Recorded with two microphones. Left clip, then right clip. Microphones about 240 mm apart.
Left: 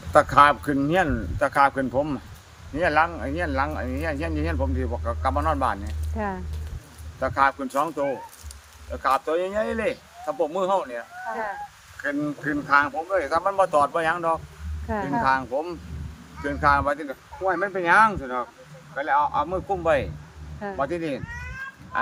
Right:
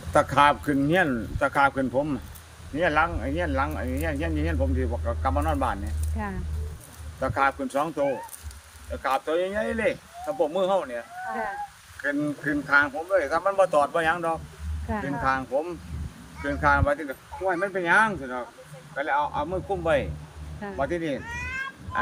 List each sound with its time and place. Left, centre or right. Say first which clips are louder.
0.1 s speech: left 3 dB; centre
6.2 s speech: left 5 dB; centre
7.2 s speech: left 3 dB; centre
12.0 s speech: even; centre